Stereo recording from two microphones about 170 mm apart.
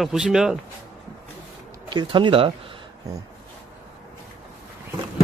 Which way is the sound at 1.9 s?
25° right (ahead or behind).